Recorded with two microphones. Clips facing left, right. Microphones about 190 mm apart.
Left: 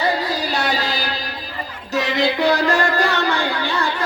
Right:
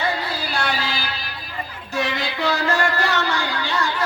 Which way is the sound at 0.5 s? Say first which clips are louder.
Even; 40° left (ahead or behind).